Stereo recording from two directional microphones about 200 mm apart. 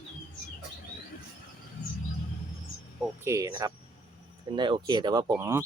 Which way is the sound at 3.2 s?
15° right (ahead or behind).